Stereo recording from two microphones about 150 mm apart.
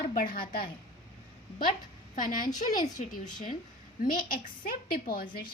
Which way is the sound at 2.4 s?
25° left (ahead or behind).